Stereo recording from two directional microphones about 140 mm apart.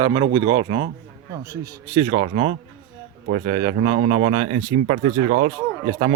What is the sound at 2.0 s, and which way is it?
Speech, 45° right (ahead or behind).